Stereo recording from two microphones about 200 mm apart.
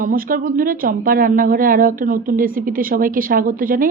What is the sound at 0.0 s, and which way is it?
A woman's voice, 45° right (ahead or behind).